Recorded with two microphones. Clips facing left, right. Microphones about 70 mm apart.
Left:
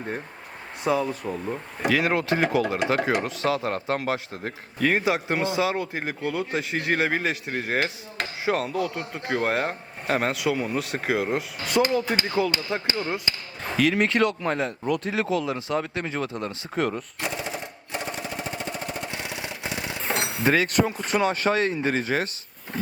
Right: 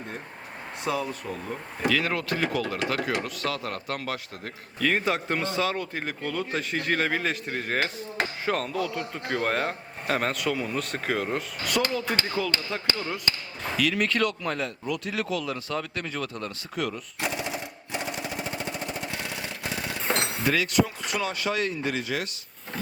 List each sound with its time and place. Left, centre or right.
0.9 s speech: centre
14.8 s speech: left
15.1 s speech: left
20.4 s speech: left